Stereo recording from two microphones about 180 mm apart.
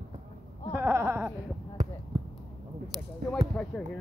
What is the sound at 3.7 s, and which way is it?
Speech, centre (ahead or behind).